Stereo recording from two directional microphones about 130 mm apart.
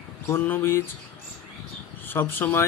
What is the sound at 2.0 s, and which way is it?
Speech, 15° left (ahead or behind).